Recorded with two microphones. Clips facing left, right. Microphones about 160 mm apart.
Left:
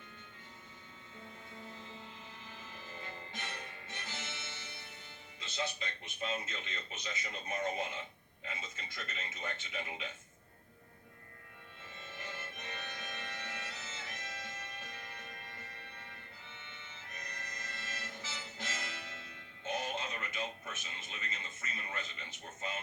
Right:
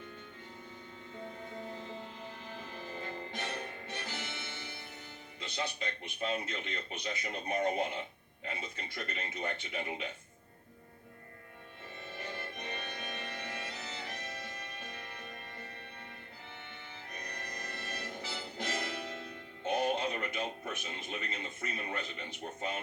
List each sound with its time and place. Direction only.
1.1 s music: 50° right (ahead or behind)
5.4 s a man's voice: 60° right (ahead or behind)
12.5 s music: 60° right (ahead or behind)
17.5 s music: 60° right (ahead or behind)
19.6 s a sound: 60° right (ahead or behind)
21.9 s a man's voice: 60° right (ahead or behind)